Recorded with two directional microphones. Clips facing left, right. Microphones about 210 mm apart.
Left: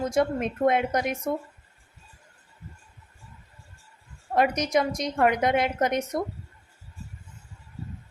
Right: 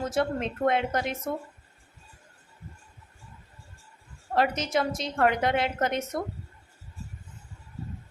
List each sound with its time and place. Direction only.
0.0 s a woman's voice: 15° left (ahead or behind)
4.4 s a woman's voice: 15° left (ahead or behind)